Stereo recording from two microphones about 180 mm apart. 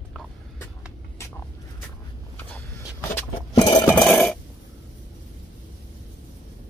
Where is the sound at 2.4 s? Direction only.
10° left (ahead or behind).